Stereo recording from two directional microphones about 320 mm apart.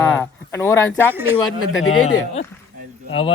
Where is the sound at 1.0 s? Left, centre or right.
Centre.